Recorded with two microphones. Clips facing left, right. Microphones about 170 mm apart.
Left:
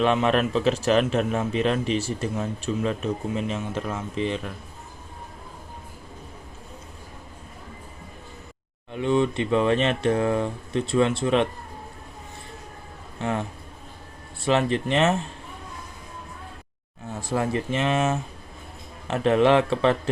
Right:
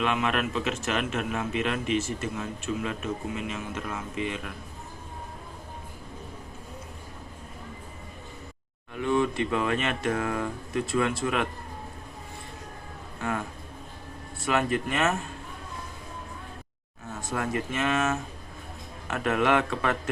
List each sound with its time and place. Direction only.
0.0 s a man's voice: 35° left (ahead or behind)
9.0 s speech: 20° left (ahead or behind)
14.3 s speech: 30° left (ahead or behind)
17.2 s speech: 30° left (ahead or behind)